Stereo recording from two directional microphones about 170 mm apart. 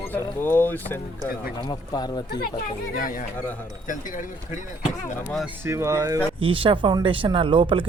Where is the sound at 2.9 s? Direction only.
55° left (ahead or behind).